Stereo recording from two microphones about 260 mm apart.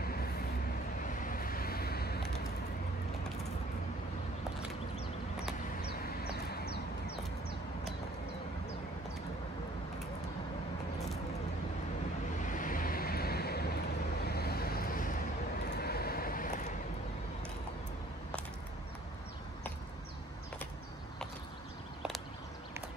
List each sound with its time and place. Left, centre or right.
0.0 s vehicle: left
5.8 s a sound: left
12.4 s vehicle: left